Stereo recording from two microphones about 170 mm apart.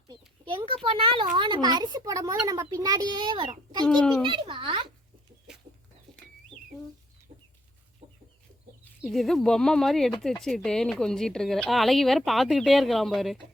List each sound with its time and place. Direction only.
0.1 s speech: 30° right (ahead or behind)
3.8 s speech: 5° left (ahead or behind)
4.2 s speech: 30° right (ahead or behind)
8.0 s chicken: 35° right (ahead or behind)
9.0 s speech: centre (ahead or behind)